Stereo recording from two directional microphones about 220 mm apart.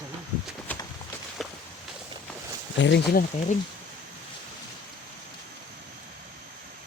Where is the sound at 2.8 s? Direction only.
50° left (ahead or behind).